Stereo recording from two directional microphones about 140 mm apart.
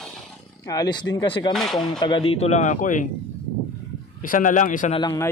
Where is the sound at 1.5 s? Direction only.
Centre (ahead or behind).